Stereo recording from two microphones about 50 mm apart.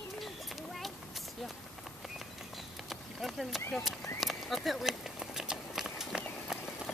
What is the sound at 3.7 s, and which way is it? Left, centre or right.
Speech, centre.